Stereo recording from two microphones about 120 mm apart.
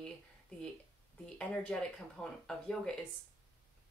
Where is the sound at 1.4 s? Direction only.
10° left (ahead or behind).